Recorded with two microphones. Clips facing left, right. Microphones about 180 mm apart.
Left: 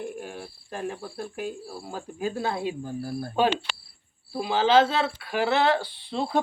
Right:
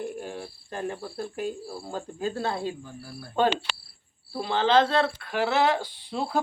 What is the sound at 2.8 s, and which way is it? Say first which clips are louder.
Speech: left 10 dB; 45° left (ahead or behind).